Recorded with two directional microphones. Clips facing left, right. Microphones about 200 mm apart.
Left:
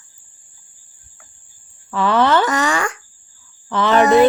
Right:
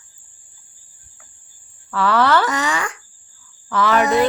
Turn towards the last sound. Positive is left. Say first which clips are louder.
# left 3 dB
turn(degrees=25)  # may be behind; listen again after turning